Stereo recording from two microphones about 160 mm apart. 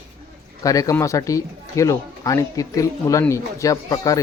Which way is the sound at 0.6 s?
20° left (ahead or behind).